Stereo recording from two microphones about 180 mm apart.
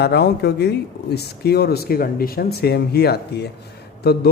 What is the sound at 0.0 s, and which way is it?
A man's voice, 65° left (ahead or behind).